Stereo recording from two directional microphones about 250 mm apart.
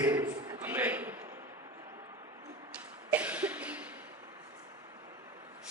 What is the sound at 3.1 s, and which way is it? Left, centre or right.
Cough, centre.